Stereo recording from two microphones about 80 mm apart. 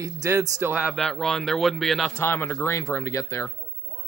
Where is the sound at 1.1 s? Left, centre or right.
Centre.